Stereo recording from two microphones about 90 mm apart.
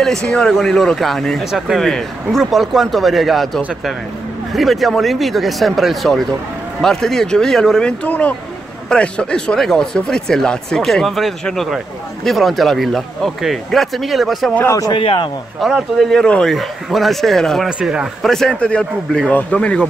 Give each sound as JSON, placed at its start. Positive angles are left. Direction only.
{"t": 0.0, "sound": "a man's voice", "side_deg": 5}
{"t": 14.9, "sound": "speech", "side_deg": 65}
{"t": 15.6, "sound": "a man's voice", "side_deg": 0}
{"t": 17.6, "sound": "a man's voice", "side_deg": -10}
{"t": 18.3, "sound": "speech", "side_deg": 5}